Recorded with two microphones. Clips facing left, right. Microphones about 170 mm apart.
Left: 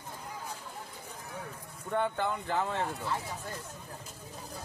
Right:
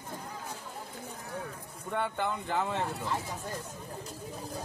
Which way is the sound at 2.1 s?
Centre (ahead or behind).